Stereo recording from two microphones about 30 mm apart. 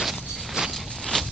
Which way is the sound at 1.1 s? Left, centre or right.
Left.